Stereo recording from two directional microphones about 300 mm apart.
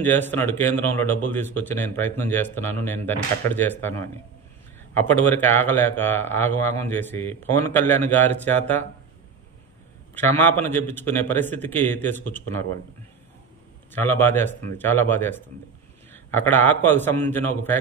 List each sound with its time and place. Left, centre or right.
0.0 s speech: centre
10.1 s speech: centre
13.9 s a man's voice: centre